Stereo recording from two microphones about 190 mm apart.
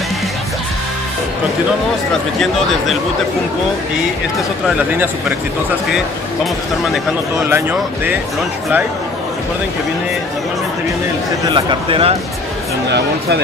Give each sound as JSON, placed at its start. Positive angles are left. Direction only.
{"t": 7.4, "sound": "speech", "side_deg": -10}
{"t": 11.4, "sound": "speech", "side_deg": -25}